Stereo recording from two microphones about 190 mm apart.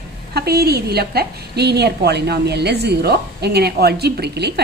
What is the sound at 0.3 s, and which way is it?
A woman's voice, 55° right (ahead or behind).